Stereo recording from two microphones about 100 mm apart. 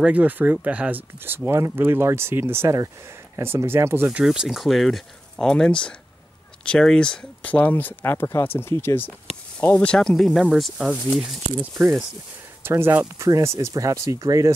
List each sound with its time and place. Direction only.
0.0 s speech: 15° right (ahead or behind)
4.1 s speech: 5° right (ahead or behind); by 9.9 s 15° left (ahead or behind)
9.9 s speech: 5° left (ahead or behind)
12.6 s speech: 25° right (ahead or behind)